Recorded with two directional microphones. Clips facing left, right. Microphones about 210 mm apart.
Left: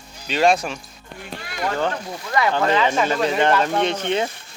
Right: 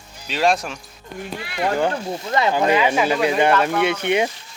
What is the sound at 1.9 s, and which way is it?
Speech, 25° right (ahead or behind).